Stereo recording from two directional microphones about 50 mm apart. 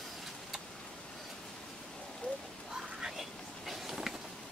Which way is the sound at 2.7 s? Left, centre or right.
Centre.